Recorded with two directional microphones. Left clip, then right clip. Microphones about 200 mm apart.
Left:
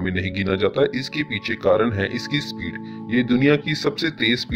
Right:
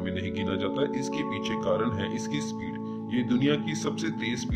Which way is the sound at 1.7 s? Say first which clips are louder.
Left 10 dB; 30° left (ahead or behind).